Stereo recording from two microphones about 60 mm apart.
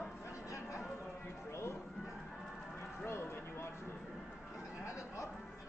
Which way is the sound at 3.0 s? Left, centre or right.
Left.